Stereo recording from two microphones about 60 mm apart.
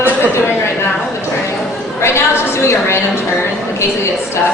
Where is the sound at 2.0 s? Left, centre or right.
Left.